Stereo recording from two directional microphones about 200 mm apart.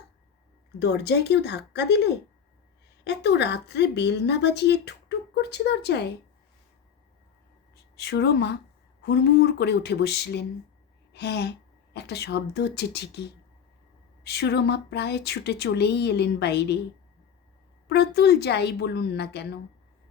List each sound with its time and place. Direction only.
0.8 s speech: 60° left (ahead or behind)
3.0 s speech: 60° left (ahead or behind)
7.9 s speech: 55° left (ahead or behind)
11.1 s a sound: 55° left (ahead or behind)
11.9 s speech: 55° left (ahead or behind)
17.8 s speech: 55° left (ahead or behind)